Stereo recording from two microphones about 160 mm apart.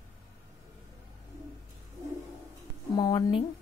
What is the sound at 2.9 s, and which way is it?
Speech, 25° left (ahead or behind).